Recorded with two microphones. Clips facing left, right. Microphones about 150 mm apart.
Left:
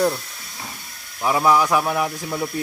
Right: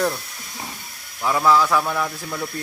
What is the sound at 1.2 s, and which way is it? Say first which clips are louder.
Speech: even; 15° left (ahead or behind).